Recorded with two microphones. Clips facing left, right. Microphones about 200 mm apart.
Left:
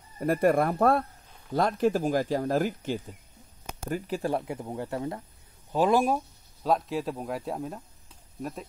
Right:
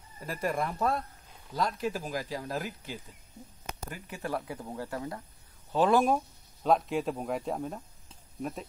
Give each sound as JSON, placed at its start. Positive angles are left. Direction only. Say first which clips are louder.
{"t": 0.2, "sound": "speech", "louder": "left 9 dB", "side_deg": 60}
{"t": 3.9, "sound": "speech", "louder": "left 8 dB", "side_deg": 30}
{"t": 5.7, "sound": "a man's voice", "louder": "left 1 dB", "side_deg": 10}